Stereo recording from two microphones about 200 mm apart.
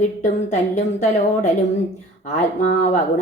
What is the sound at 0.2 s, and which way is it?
A woman's voice, 35° left (ahead or behind).